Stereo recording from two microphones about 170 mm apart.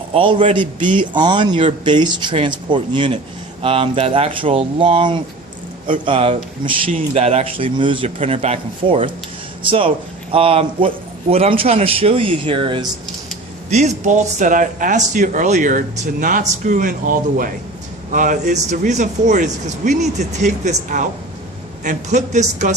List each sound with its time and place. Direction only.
0.1 s a man's voice: 30° right (ahead or behind)
13.7 s speech: 40° right (ahead or behind)